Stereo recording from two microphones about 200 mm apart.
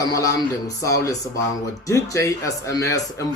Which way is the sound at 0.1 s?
15° left (ahead or behind).